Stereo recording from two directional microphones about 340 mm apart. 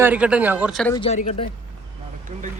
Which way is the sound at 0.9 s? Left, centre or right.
Centre.